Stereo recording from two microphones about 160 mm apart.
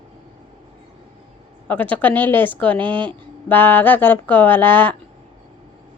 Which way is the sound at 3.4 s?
10° left (ahead or behind).